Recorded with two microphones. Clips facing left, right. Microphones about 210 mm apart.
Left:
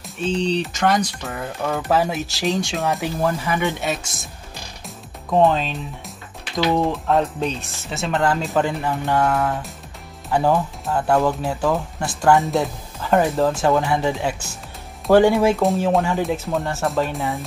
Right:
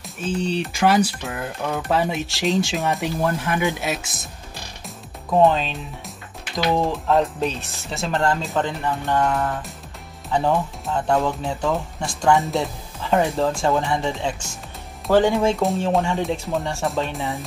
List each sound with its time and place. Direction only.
0.0 s speech: 5° right (ahead or behind)
5.4 s speech: centre (ahead or behind)
8.5 s speech: 10° left (ahead or behind)
15.3 s speech: centre (ahead or behind)